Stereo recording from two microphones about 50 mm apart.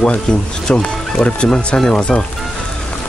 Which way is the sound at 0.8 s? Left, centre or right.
Centre.